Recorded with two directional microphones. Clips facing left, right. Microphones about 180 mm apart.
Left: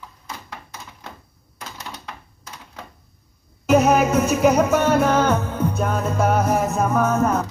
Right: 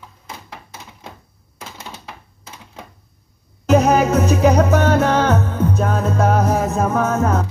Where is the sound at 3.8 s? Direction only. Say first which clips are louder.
Right 2 dB; 35° right (ahead or behind).